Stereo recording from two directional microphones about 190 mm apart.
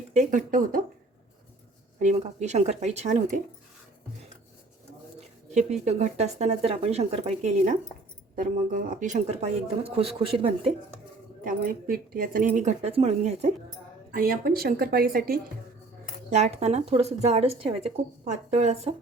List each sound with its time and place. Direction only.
0.1 s speech: 40° right (ahead or behind)
2.0 s speech: 40° right (ahead or behind)
5.8 s speech: 35° right (ahead or behind)
11.4 s speech: 50° right (ahead or behind); by 13.5 s 35° right (ahead or behind)
14.1 s speech: 50° right (ahead or behind)
16.3 s speech: 35° right (ahead or behind)